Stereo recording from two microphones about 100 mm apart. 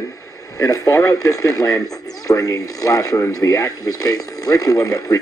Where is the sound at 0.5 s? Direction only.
35° left (ahead or behind).